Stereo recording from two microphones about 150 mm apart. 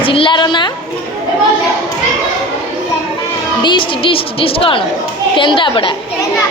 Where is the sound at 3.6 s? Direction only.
35° left (ahead or behind).